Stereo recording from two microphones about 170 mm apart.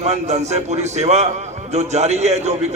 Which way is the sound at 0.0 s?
40° right (ahead or behind).